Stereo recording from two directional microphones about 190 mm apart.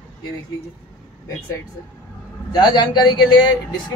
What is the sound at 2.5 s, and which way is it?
A man's voice, 25° left (ahead or behind).